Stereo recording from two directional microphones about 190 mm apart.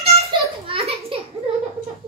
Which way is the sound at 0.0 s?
30° right (ahead or behind).